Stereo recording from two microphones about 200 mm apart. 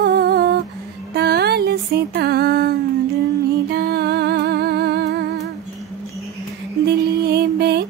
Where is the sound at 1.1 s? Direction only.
55° right (ahead or behind).